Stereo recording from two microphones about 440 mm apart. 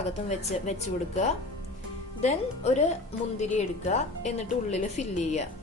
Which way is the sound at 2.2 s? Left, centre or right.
Centre.